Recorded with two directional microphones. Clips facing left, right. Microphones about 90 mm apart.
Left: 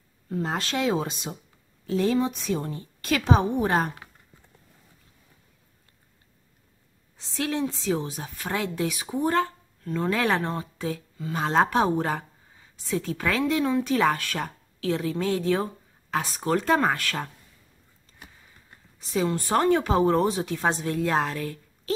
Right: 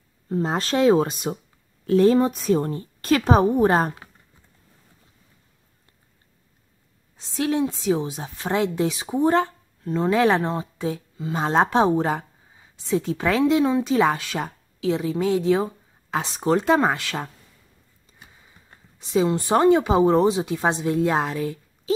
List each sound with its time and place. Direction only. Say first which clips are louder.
0.3 s a woman's voice: right 5 dB; 30° right (ahead or behind)
7.2 s speech: right 5 dB; 20° right (ahead or behind)
18.7 s speech: right 7 dB; 20° right (ahead or behind)